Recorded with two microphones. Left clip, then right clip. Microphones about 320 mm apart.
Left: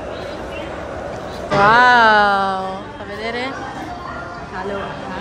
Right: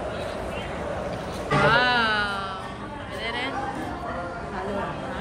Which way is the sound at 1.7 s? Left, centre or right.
Left.